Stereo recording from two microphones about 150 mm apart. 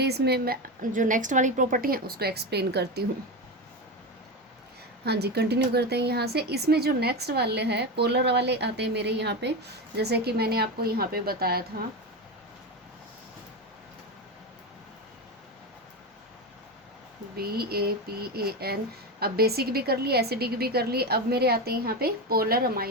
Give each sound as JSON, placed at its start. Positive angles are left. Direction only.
{"t": 0.0, "sound": "a woman's voice", "side_deg": -90}
{"t": 5.0, "sound": "speech", "side_deg": -90}
{"t": 17.3, "sound": "speech", "side_deg": -90}